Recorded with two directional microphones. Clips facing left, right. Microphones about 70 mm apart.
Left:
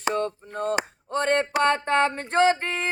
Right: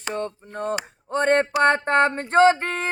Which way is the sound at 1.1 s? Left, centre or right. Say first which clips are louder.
Right 4 dB; right.